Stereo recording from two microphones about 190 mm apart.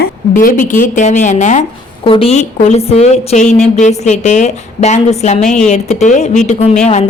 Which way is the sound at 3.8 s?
40° left (ahead or behind).